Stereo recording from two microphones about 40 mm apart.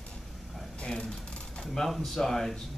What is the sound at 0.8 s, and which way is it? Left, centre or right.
Speech, left.